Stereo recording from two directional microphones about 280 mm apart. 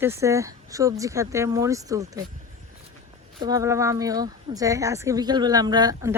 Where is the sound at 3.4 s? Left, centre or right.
Centre.